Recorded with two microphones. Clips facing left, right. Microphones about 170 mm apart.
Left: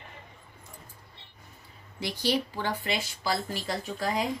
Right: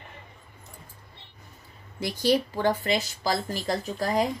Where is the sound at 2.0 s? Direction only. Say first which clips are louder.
Right 5 dB; 45° right (ahead or behind).